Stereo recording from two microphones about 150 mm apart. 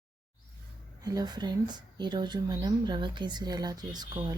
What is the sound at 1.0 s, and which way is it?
Speech, 25° right (ahead or behind).